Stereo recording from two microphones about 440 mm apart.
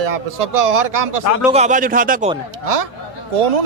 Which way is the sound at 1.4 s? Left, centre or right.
Centre.